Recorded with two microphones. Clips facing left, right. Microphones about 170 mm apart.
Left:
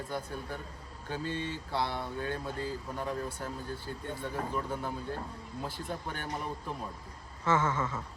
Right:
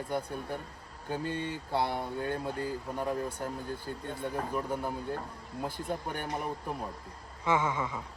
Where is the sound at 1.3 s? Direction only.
55° right (ahead or behind).